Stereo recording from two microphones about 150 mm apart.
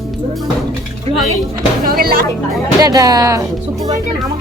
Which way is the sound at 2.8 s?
25° right (ahead or behind).